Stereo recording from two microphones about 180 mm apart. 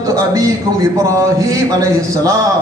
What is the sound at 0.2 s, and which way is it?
A man's voice, 20° right (ahead or behind).